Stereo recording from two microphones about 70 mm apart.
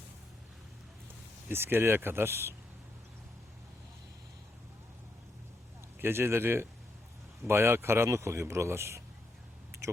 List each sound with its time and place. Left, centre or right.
1.5 s speech: right
6.0 s speech: right